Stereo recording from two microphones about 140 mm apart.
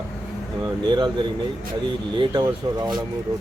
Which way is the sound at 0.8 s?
35° right (ahead or behind).